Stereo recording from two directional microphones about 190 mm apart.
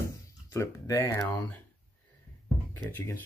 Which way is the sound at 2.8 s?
10° left (ahead or behind).